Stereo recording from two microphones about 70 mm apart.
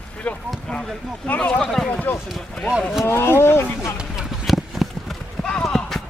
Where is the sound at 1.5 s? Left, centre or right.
Centre.